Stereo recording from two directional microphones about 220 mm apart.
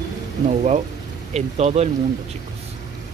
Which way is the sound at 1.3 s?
30° right (ahead or behind).